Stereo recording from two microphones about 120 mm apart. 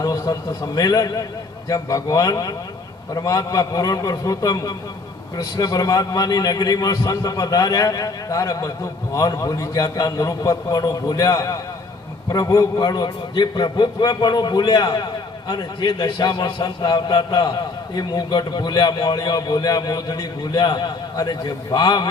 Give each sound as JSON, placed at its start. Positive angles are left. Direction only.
{"t": 0.0, "sound": "a man's voice", "side_deg": 30}